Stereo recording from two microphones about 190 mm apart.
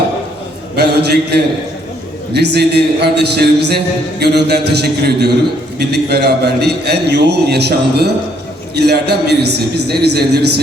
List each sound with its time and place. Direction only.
0.8 s a man's voice: 60° right (ahead or behind)